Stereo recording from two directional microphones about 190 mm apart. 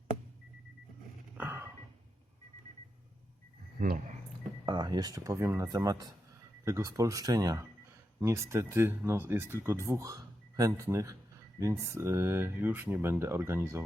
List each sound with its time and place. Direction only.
1.4 s a sound: 10° right (ahead or behind)
3.8 s speech: 45° right (ahead or behind)
4.6 s speech: 25° right (ahead or behind)